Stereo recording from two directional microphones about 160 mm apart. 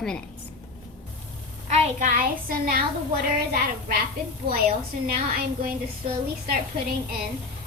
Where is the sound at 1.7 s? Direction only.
45° right (ahead or behind); by 2.8 s 60° right (ahead or behind).